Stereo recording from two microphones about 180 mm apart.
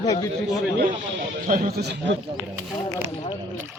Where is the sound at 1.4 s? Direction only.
55° right (ahead or behind).